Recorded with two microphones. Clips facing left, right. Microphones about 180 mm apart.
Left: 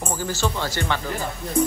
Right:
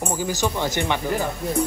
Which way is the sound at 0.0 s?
15° right (ahead or behind).